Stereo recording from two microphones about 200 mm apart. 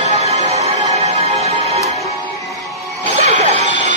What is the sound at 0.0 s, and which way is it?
Music, 35° right (ahead or behind).